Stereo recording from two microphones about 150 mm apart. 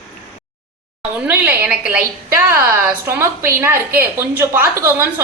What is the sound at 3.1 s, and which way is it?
A woman's voice, 15° right (ahead or behind).